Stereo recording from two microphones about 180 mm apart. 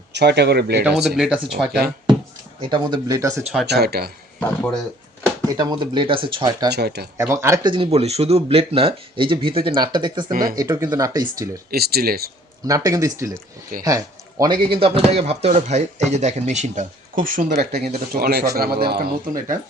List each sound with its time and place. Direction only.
0.1 s speech: 70° right (ahead or behind)
0.8 s speech: 5° right (ahead or behind)
2.6 s speech: 25° right (ahead or behind)
3.7 s speech: 65° right (ahead or behind)
4.4 s speech: 5° left (ahead or behind)
5.5 s speech: 25° right (ahead or behind)
6.7 s speech: 65° right (ahead or behind)
7.2 s speech: 15° right (ahead or behind)
11.7 s speech: 60° right (ahead or behind)
12.6 s speech: 20° right (ahead or behind); by 17.7 s 45° right (ahead or behind)
17.7 s speech: 60° right (ahead or behind)